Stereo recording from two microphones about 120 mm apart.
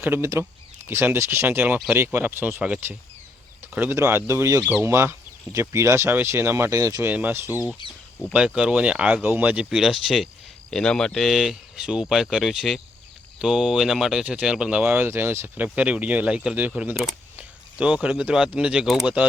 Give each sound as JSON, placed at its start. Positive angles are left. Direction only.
{"t": 0.0, "sound": "speech", "side_deg": -20}
{"t": 4.6, "sound": "speech", "side_deg": -10}
{"t": 7.1, "sound": "speech", "side_deg": -15}